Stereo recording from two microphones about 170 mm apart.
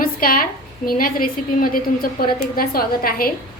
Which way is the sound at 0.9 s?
55° left (ahead or behind).